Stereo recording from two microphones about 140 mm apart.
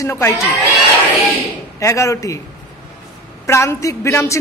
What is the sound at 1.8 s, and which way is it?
Speech, 20° left (ahead or behind).